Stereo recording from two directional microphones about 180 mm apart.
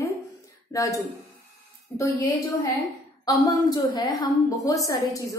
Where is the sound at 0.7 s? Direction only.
20° left (ahead or behind).